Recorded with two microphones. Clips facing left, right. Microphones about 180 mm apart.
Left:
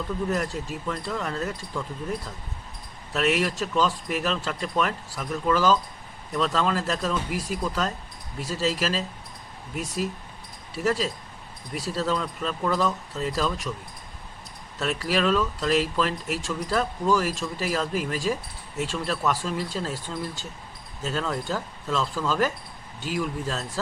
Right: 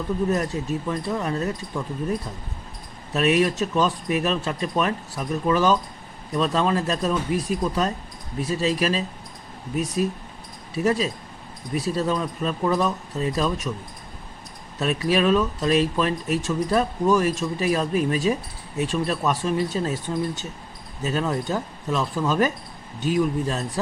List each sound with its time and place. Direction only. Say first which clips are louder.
0.7 s speech: right 5 dB; 20° right (ahead or behind)
3.1 s speech: right 4 dB; 20° right (ahead or behind)
14.8 s speech: right 4 dB; 20° right (ahead or behind)